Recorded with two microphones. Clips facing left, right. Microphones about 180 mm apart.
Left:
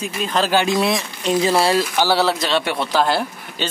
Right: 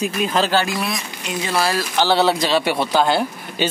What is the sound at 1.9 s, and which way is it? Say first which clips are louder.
Speech: right 1 dB; 5° left (ahead or behind).